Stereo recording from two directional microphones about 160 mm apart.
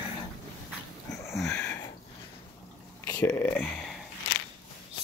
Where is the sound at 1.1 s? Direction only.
20° left (ahead or behind).